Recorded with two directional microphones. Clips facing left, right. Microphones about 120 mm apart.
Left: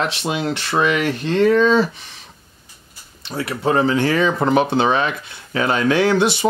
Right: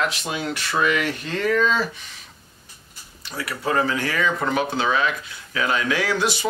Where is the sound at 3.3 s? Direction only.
25° left (ahead or behind).